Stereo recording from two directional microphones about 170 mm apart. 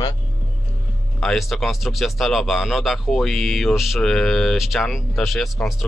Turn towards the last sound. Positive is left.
turn(degrees=0)  # may be behind; listen again after turning